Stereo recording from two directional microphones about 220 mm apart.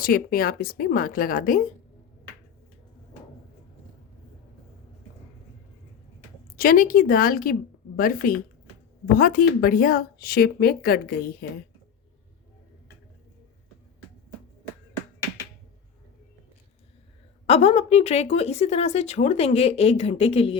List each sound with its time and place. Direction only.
0.0 s a woman's voice: 40° left (ahead or behind)
6.6 s a woman's voice: 40° left (ahead or behind)
17.4 s speech: 30° left (ahead or behind)